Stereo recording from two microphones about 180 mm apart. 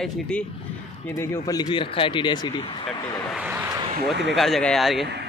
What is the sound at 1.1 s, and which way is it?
Speech, 20° left (ahead or behind).